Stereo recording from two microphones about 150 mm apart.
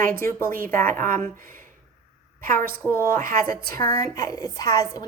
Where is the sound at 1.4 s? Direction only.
65° right (ahead or behind).